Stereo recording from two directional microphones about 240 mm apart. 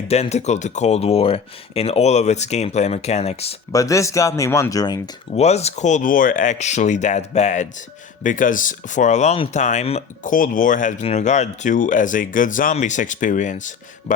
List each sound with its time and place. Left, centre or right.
0.1 s speech: left
3.7 s speech: centre; by 14.2 s left